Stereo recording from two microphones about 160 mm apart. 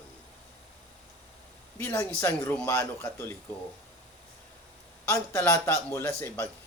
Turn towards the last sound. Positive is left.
turn(degrees=15)  # may be behind; listen again after turning